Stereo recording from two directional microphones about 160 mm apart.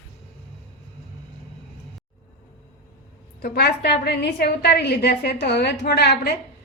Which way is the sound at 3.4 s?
75° left (ahead or behind).